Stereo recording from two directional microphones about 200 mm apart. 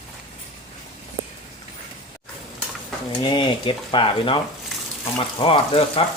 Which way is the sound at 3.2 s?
25° left (ahead or behind).